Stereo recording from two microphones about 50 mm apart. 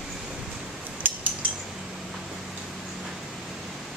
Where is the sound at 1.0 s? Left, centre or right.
Right.